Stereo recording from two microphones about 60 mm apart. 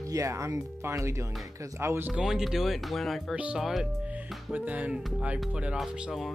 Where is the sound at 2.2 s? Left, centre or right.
Centre.